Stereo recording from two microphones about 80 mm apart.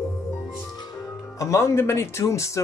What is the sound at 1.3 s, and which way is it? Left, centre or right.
Speech, left.